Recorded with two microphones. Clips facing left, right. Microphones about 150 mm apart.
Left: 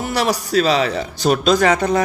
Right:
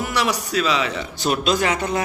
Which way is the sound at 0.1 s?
35° left (ahead or behind).